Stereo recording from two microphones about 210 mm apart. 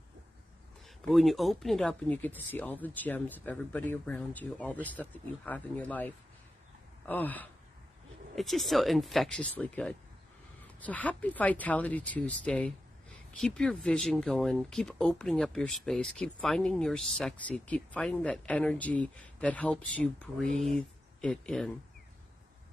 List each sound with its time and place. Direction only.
0.8 s speech: centre (ahead or behind)